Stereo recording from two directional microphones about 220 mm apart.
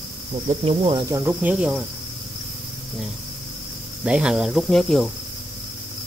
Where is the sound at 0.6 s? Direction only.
25° right (ahead or behind).